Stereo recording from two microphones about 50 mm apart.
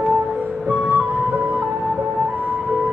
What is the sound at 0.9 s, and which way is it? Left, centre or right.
Music, right.